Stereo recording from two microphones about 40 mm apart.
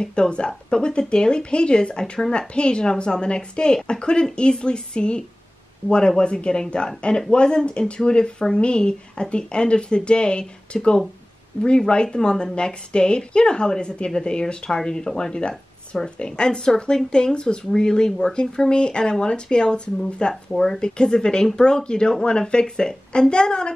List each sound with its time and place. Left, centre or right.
0.0 s speech: left